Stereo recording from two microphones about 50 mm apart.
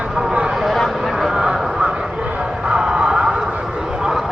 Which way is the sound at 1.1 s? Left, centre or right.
Centre.